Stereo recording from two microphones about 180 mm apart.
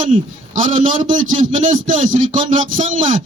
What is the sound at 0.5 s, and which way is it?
A man's voice, 45° right (ahead or behind).